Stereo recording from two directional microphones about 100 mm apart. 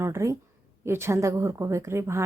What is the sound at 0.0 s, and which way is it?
A woman's voice, 30° right (ahead or behind).